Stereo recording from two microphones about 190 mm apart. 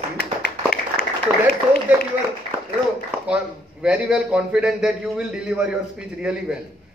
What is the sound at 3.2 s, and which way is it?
A man's voice, 5° right (ahead or behind).